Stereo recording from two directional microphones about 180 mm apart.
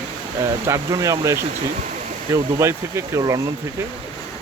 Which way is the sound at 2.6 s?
15° right (ahead or behind).